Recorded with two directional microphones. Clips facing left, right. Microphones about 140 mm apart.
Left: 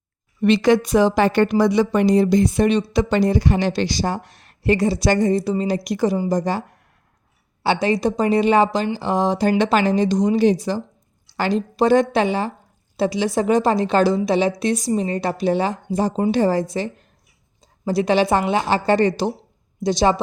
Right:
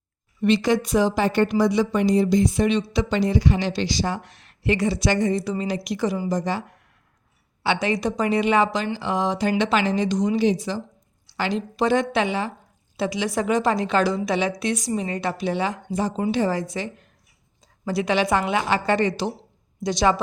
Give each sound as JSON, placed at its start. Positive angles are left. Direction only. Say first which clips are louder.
{"t": 0.4, "sound": "a woman's voice", "louder": "left 4 dB", "side_deg": 65}
{"t": 19.8, "sound": "a woman's voice", "louder": "left 3 dB", "side_deg": 30}